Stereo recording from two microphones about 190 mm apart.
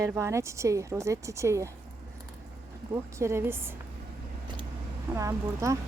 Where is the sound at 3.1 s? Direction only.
15° right (ahead or behind).